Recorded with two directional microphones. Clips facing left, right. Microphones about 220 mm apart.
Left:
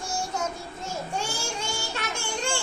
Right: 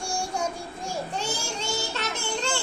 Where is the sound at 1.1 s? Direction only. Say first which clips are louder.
Even; 10° left (ahead or behind).